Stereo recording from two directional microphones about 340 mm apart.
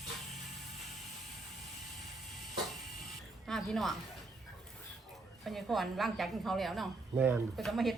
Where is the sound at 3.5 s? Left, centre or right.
Centre.